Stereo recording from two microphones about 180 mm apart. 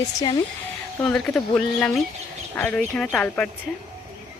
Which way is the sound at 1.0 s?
5° left (ahead or behind).